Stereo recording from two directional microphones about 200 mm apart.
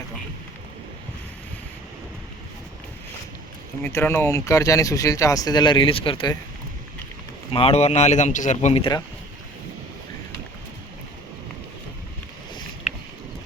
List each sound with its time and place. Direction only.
3.8 s speech: 10° left (ahead or behind); by 6.3 s 25° left (ahead or behind)
7.5 s speech: 30° left (ahead or behind)